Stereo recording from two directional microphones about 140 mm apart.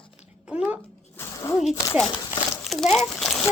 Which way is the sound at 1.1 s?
20° left (ahead or behind).